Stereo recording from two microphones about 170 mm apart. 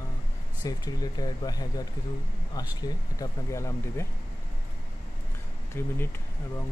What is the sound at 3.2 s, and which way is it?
Speech, 15° left (ahead or behind).